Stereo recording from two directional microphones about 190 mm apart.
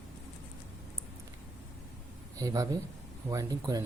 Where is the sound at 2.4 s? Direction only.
20° right (ahead or behind).